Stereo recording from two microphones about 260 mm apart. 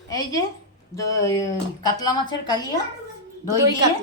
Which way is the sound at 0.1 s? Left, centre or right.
Centre.